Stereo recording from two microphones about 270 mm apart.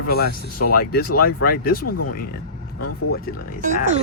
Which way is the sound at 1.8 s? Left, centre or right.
Left.